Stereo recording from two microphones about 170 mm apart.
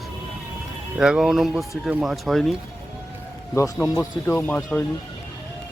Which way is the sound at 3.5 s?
20° left (ahead or behind).